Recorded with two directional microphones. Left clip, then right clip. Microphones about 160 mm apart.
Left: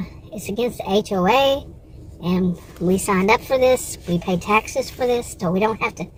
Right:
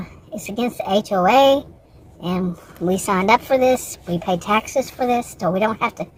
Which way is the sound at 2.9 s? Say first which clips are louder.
Right 1 dB; 20° right (ahead or behind).